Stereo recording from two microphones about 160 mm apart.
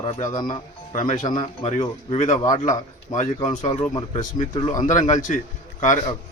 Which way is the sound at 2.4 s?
20° left (ahead or behind).